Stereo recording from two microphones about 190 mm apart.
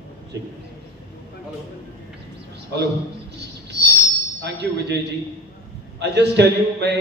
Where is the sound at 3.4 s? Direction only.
60° right (ahead or behind).